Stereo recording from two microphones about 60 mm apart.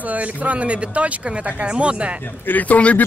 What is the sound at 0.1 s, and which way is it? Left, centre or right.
Speech, right.